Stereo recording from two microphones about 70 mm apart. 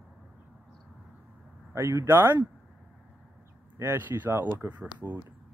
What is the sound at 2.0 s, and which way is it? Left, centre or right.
Speech, right.